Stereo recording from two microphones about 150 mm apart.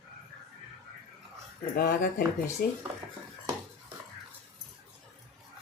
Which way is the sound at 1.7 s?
75° left (ahead or behind).